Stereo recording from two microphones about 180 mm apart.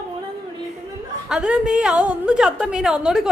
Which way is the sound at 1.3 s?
5° right (ahead or behind).